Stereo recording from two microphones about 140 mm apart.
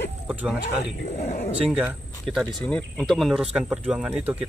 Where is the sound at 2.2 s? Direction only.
5° left (ahead or behind).